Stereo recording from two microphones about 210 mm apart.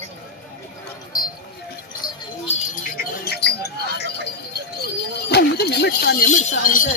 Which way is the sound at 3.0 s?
50° left (ahead or behind).